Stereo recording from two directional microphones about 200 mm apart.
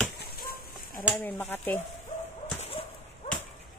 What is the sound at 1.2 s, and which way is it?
Speech, 10° left (ahead or behind).